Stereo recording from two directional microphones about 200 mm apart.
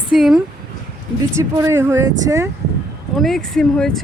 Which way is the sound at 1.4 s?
15° right (ahead or behind).